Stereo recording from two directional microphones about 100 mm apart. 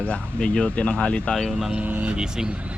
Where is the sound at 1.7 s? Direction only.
15° right (ahead or behind).